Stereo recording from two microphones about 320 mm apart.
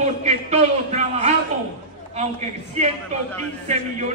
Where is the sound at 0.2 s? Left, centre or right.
Right.